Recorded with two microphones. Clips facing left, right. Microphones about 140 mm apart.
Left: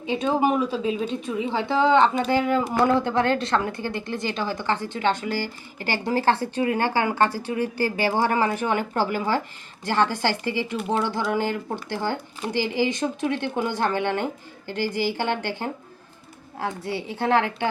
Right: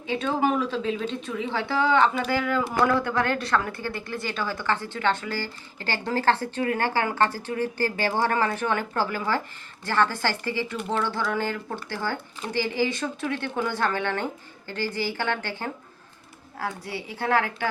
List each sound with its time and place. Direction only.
0.1 s a woman's voice: 15° left (ahead or behind)